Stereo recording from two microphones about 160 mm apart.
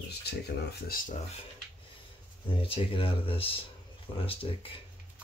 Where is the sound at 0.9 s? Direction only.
65° left (ahead or behind).